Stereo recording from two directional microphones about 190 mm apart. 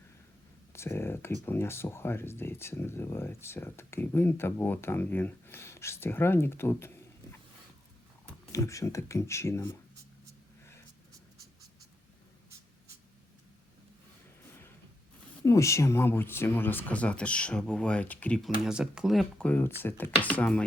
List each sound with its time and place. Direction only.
0.7 s speech: 15° left (ahead or behind)
8.5 s speech: 15° left (ahead or behind)
15.4 s speech: 15° left (ahead or behind)